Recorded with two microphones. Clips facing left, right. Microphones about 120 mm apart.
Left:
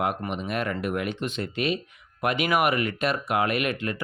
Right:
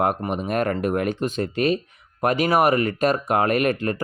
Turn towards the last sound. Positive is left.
turn(degrees=-40)  # may be behind; listen again after turning